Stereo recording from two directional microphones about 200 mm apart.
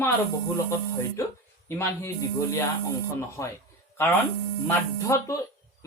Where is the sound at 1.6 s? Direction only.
15° left (ahead or behind).